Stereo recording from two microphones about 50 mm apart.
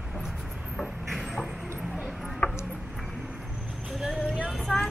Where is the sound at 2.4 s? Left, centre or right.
Left.